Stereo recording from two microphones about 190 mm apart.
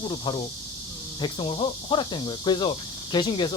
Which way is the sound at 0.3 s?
25° left (ahead or behind).